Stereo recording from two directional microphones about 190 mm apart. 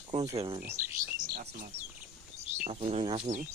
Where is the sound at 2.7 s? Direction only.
30° right (ahead or behind).